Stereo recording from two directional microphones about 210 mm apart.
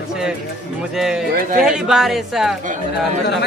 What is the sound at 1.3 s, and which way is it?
Speech, 40° right (ahead or behind).